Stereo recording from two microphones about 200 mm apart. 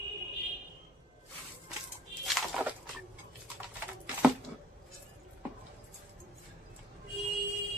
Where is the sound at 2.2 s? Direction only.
Centre (ahead or behind).